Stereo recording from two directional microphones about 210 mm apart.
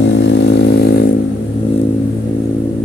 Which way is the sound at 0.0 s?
60° left (ahead or behind).